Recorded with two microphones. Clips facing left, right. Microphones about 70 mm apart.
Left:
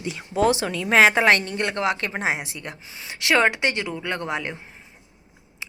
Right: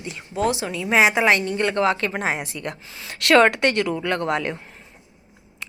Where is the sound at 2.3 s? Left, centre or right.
Right.